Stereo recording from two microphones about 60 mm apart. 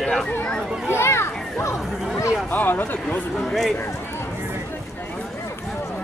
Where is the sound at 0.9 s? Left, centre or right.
Left.